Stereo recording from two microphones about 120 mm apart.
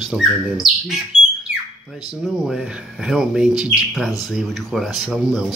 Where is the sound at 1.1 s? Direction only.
55° left (ahead or behind).